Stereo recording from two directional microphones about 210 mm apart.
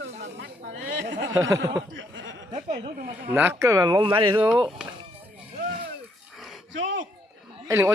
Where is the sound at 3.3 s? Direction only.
10° right (ahead or behind).